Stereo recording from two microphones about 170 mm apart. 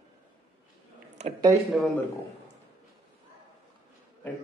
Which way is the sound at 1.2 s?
40° right (ahead or behind).